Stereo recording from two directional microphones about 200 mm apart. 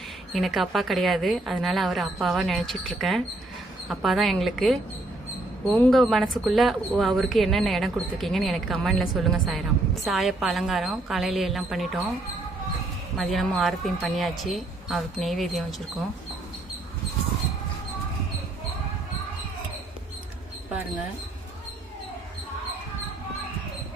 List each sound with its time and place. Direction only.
0.3 s speech: centre (ahead or behind)
13.1 s speech: centre (ahead or behind)